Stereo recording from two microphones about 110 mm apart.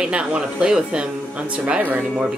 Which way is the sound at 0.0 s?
10° right (ahead or behind).